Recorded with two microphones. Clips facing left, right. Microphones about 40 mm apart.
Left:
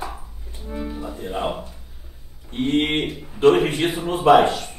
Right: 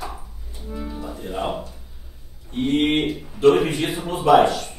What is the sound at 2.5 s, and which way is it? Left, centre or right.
A man's voice, left.